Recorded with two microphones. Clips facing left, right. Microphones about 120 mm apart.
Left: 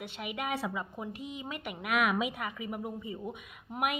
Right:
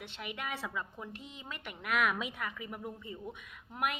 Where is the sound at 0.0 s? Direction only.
10° left (ahead or behind).